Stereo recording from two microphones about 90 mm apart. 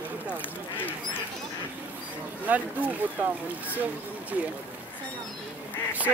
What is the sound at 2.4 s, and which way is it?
Speech, 20° right (ahead or behind).